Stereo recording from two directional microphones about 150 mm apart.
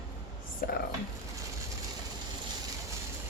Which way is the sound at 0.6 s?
90° left.